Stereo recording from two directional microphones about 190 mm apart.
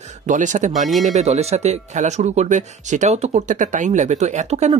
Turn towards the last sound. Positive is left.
turn(degrees=-35)  # may be behind; listen again after turning